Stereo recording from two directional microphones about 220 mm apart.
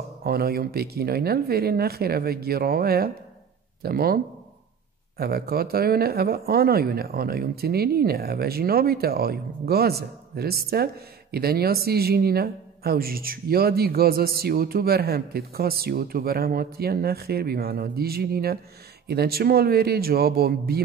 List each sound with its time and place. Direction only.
0.2 s speech: 45° right (ahead or behind)